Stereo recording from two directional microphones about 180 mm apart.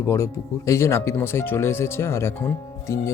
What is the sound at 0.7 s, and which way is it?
Speech, 15° left (ahead or behind).